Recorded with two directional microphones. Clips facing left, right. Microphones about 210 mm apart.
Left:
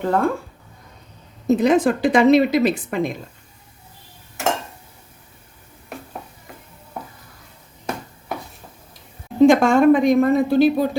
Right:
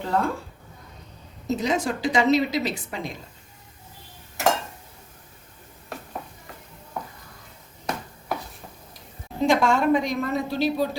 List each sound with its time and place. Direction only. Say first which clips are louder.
0.0 s a woman's voice: left 5 dB; 55° left (ahead or behind)
1.5 s a woman's voice: left 9 dB; 55° left (ahead or behind)
9.5 s a woman's voice: left 4 dB; 50° left (ahead or behind)